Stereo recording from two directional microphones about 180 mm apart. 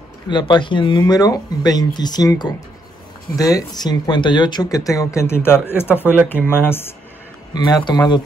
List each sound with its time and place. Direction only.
0.3 s speech: 25° left (ahead or behind)